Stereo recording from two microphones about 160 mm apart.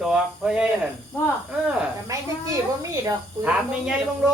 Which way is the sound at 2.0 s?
20° right (ahead or behind).